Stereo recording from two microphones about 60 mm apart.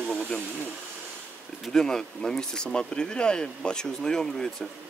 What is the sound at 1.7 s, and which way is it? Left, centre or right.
Speech, centre.